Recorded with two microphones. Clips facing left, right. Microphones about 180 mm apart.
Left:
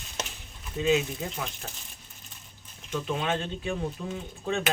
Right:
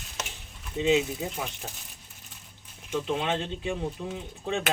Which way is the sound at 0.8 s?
20° right (ahead or behind).